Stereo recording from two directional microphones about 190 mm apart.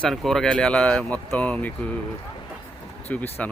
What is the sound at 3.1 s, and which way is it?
Speech, 10° left (ahead or behind).